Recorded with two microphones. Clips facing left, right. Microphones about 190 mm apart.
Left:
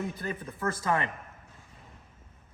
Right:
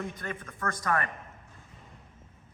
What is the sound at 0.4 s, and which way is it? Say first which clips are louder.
Speech: left 2 dB; 30° left (ahead or behind).